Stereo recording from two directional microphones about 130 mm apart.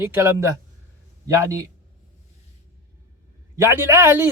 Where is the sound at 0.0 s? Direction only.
20° right (ahead or behind).